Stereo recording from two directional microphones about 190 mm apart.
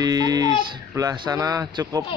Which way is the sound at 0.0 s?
20° right (ahead or behind).